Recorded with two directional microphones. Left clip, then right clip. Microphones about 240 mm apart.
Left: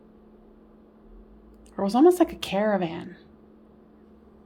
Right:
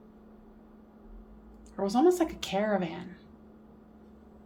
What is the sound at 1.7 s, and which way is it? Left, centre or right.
Speech, left.